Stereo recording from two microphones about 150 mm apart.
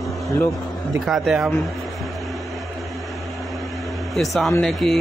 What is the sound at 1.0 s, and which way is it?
Speech, centre (ahead or behind).